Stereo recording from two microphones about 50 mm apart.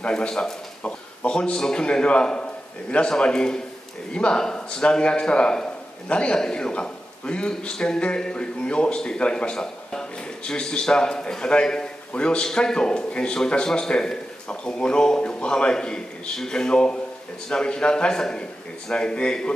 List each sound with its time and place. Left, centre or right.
0.0 s a man's voice: centre